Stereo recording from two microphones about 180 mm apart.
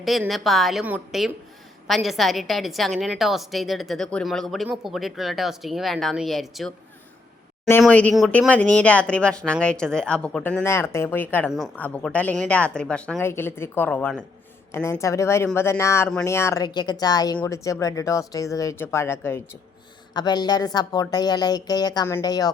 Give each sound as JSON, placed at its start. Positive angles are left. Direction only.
{"t": 0.0, "sound": "speech", "side_deg": 0}
{"t": 7.8, "sound": "speech", "side_deg": 5}
{"t": 11.4, "sound": "speech", "side_deg": 0}